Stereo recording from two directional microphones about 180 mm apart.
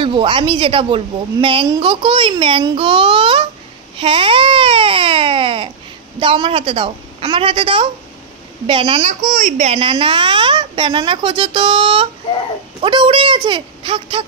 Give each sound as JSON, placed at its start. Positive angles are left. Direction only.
{"t": 0.0, "sound": "a woman's voice", "side_deg": -30}
{"t": 4.0, "sound": "baby cry", "side_deg": -30}
{"t": 6.1, "sound": "a woman's voice", "side_deg": -30}
{"t": 9.2, "sound": "a woman's voice", "side_deg": -45}